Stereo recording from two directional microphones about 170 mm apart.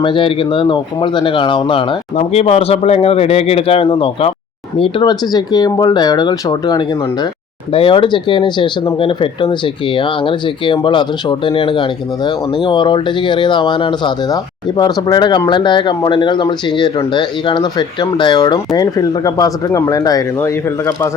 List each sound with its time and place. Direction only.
0.0 s speech: 30° left (ahead or behind)